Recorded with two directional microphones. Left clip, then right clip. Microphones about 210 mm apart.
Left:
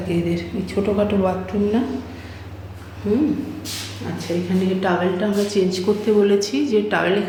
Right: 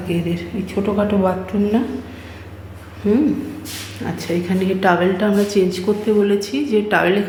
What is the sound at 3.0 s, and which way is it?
Speech, 30° right (ahead or behind).